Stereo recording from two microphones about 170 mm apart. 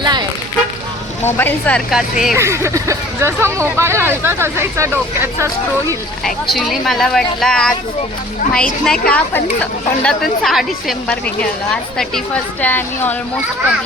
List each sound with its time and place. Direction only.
0.0 s a sound: 25° right (ahead or behind)
1.2 s speech: 10° left (ahead or behind)
1.9 s a woman's voice: 5° right (ahead or behind)
2.3 s speech: 15° right (ahead or behind)
6.2 s a woman's voice: centre (ahead or behind)
8.8 s a woman's voice: 5° left (ahead or behind)